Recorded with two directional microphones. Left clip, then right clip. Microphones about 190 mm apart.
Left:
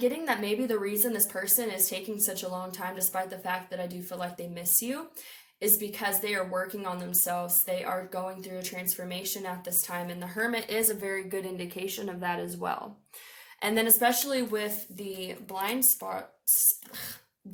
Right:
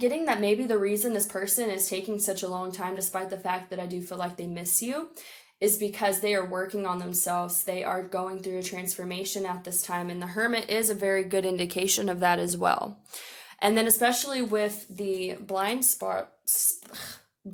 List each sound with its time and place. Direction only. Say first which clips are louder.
0.0 s a woman's voice: right 3 dB; 45° right (ahead or behind)